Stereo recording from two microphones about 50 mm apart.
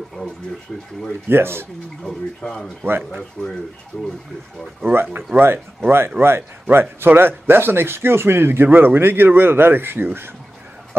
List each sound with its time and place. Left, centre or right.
0.2 s speech: left
1.3 s speech: right
2.0 s speech: centre
3.4 s speech: left
4.9 s speech: right